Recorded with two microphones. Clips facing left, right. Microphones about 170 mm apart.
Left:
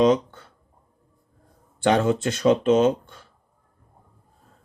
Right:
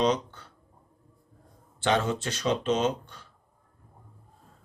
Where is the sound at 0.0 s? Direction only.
50° left (ahead or behind).